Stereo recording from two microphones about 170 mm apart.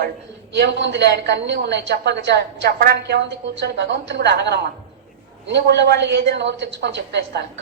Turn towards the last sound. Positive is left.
turn(degrees=-85)